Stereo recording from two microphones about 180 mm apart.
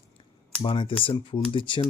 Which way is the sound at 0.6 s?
30° left (ahead or behind).